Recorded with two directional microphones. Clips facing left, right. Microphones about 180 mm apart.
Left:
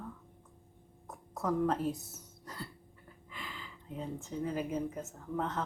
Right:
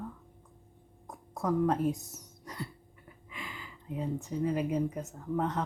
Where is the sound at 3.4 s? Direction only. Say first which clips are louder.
Right 2 dB; 5° right (ahead or behind).